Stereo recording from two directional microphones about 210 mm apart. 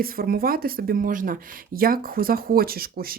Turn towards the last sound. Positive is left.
turn(degrees=-45)  # may be behind; listen again after turning